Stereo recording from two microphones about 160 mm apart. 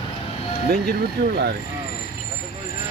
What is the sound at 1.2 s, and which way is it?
Speech, 90° right.